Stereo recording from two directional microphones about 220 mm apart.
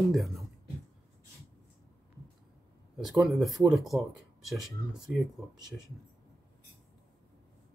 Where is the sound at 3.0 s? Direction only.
Centre (ahead or behind).